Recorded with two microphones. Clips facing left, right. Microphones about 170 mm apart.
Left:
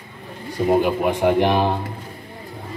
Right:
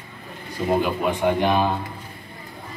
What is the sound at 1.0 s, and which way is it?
Speech, 60° left (ahead or behind).